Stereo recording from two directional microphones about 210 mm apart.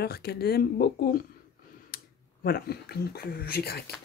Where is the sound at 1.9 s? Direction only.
45° left (ahead or behind).